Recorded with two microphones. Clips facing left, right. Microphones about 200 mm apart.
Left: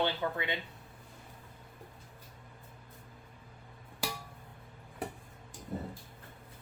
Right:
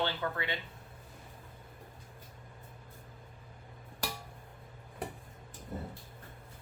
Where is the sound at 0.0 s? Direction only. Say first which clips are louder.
Left 2 dB; 15° left (ahead or behind).